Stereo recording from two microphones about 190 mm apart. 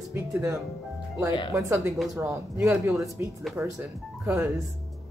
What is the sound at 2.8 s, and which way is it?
Speech, centre (ahead or behind).